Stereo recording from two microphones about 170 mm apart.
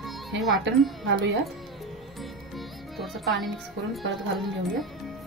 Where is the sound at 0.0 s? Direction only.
Centre (ahead or behind).